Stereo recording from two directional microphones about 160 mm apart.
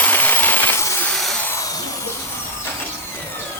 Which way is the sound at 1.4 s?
20° left (ahead or behind).